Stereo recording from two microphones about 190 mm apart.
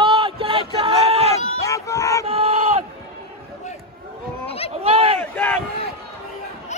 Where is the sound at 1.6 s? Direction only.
15° left (ahead or behind).